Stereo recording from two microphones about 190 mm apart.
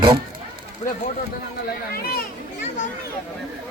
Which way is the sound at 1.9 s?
55° left (ahead or behind).